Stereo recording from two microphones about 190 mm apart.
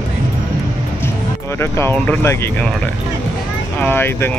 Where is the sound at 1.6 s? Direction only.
10° left (ahead or behind).